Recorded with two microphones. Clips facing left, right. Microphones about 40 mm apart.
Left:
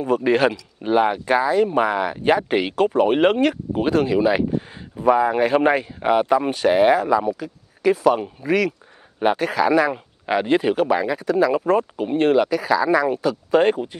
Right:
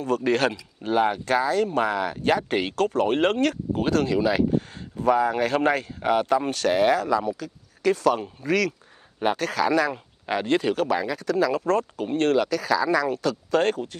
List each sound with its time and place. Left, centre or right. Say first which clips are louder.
0.0 s speech: left 5 dB; centre